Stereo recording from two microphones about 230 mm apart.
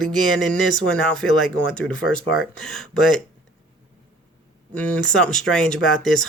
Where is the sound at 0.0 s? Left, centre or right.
Centre.